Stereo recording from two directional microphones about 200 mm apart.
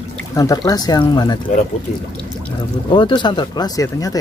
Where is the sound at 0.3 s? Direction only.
15° left (ahead or behind).